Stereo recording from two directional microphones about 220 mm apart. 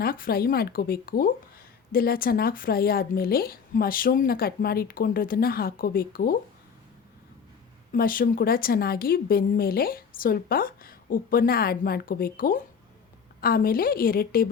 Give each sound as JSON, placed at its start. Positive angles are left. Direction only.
{"t": 0.0, "sound": "speech", "side_deg": 40}
{"t": 7.9, "sound": "a woman's voice", "side_deg": 40}